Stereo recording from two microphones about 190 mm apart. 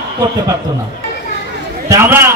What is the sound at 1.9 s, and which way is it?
Speech, 15° right (ahead or behind).